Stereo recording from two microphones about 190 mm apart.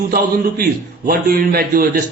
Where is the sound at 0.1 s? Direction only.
50° right (ahead or behind).